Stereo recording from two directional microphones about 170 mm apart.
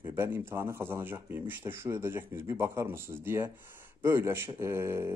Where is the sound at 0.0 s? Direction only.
15° right (ahead or behind).